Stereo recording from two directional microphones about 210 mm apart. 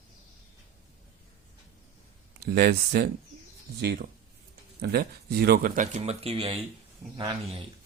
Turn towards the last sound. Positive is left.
turn(degrees=-25)  # may be behind; listen again after turning